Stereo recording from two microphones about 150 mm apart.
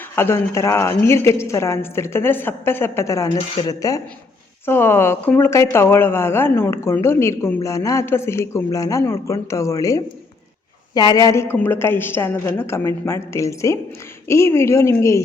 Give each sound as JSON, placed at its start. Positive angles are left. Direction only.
{"t": 0.2, "sound": "a woman's voice", "side_deg": 15}
{"t": 3.2, "sound": "speech", "side_deg": 40}
{"t": 3.6, "sound": "a woman's voice", "side_deg": 25}